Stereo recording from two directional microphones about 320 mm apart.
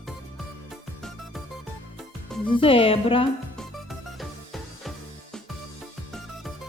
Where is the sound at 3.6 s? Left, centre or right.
Centre.